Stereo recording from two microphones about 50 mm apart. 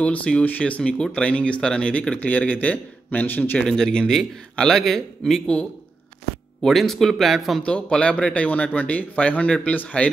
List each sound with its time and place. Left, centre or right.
0.0 s a man's voice: left
3.6 s a man's voice: centre
6.6 s speech: centre
7.6 s speech: left
8.5 s speech: left